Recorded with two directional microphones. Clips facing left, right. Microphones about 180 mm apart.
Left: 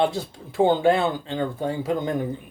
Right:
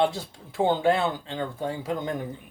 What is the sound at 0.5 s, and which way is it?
Speech, 15° left (ahead or behind).